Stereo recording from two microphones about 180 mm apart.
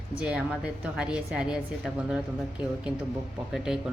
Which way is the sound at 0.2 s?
5° right (ahead or behind).